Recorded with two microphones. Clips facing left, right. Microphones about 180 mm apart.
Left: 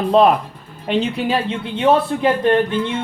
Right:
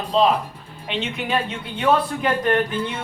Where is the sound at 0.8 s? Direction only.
35° left (ahead or behind).